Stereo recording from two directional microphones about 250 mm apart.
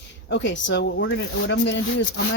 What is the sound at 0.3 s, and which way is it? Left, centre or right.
Speech, left.